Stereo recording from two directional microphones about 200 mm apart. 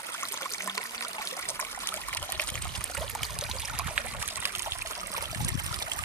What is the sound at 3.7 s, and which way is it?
Trickle, 5° right (ahead or behind).